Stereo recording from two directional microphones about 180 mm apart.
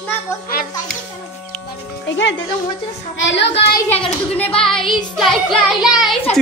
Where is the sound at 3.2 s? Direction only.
80° left.